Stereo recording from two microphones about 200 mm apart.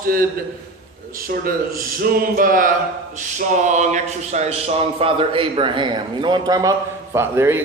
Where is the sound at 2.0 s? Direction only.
45° right (ahead or behind).